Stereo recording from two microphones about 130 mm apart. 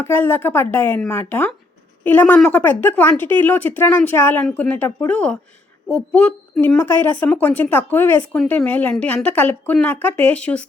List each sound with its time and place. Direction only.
0.0 s speech: 15° left (ahead or behind)